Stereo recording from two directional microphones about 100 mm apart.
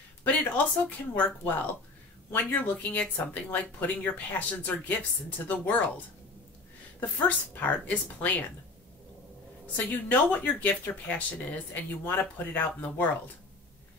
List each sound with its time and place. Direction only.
0.2 s speech: 15° left (ahead or behind)
7.0 s speech: 15° left (ahead or behind)
9.8 s speech: 15° left (ahead or behind)